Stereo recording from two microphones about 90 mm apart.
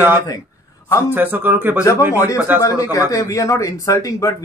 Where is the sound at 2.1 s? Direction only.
35° left (ahead or behind).